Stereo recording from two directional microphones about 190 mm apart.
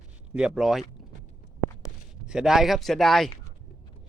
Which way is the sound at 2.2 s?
5° right (ahead or behind).